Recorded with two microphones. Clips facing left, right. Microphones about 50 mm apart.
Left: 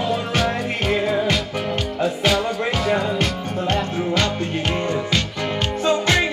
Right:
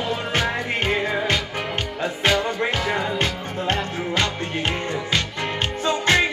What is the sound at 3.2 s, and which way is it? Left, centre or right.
Music, right.